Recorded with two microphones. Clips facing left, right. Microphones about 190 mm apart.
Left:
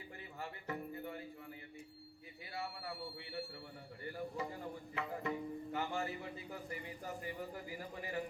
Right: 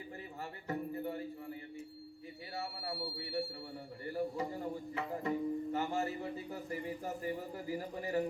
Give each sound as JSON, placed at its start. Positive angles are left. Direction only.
{"t": 0.7, "sound": "music", "side_deg": -40}
{"t": 2.6, "sound": "a sound", "side_deg": -40}
{"t": 4.1, "sound": "music", "side_deg": -35}